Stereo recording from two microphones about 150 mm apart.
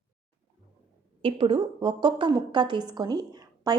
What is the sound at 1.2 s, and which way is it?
A woman's voice, 35° right (ahead or behind).